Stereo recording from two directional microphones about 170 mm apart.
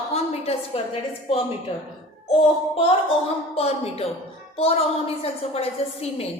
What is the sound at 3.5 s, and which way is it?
A woman's voice, 35° left (ahead or behind).